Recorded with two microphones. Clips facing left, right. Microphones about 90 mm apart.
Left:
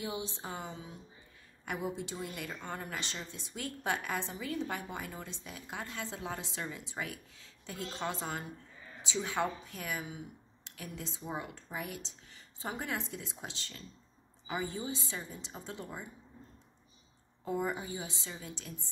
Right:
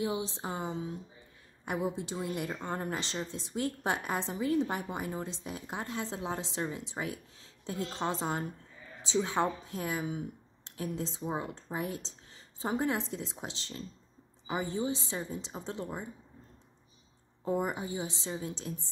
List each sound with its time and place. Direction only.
0.4 s a woman's voice: 20° right (ahead or behind)
1.7 s a woman's voice: 25° right (ahead or behind)
10.0 s a sound: 40° right (ahead or behind)
10.8 s a woman's voice: 25° right (ahead or behind)
17.6 s a woman's voice: 20° right (ahead or behind)